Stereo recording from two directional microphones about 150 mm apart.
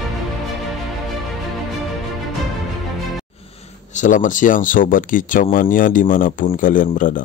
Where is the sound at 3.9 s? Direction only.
60° left (ahead or behind).